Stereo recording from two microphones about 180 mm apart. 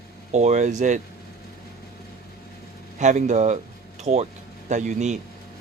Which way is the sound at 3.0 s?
40° right (ahead or behind).